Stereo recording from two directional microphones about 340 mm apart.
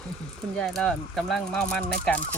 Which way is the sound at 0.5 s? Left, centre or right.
Centre.